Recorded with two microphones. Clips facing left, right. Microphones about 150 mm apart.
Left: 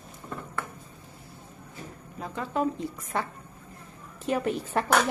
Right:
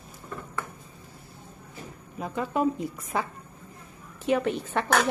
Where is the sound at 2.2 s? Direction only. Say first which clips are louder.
Right 2 dB; 10° right (ahead or behind).